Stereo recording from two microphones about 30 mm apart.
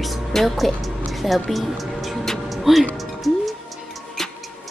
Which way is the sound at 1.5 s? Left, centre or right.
Centre.